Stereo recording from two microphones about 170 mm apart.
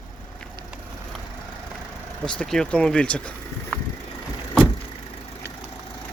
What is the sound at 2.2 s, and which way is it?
Speech, 5° left (ahead or behind).